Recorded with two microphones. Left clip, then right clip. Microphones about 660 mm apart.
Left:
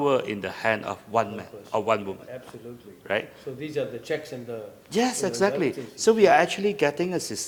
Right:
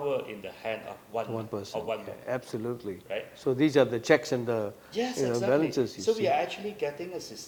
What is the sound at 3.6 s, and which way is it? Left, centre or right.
Speech, right.